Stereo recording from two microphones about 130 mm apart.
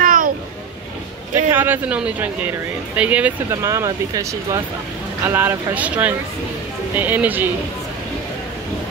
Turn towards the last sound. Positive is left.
turn(degrees=-15)  # may be behind; listen again after turning